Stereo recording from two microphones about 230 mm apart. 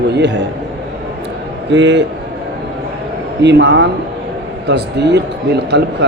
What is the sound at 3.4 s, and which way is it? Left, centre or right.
Speech, right.